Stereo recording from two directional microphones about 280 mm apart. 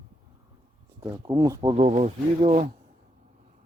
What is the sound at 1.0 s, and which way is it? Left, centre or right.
Speech, centre.